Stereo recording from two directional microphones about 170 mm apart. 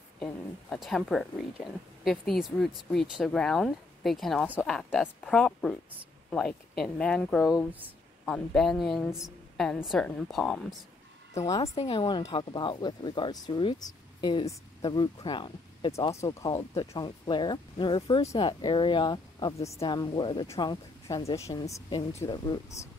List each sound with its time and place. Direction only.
0.2 s a woman's voice: 5° left (ahead or behind)
11.3 s speech: 20° left (ahead or behind)
11.8 s a woman's voice: 30° left (ahead or behind)